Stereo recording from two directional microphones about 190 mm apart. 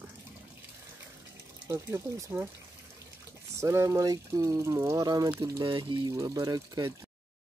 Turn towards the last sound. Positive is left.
turn(degrees=-20)  # may be behind; listen again after turning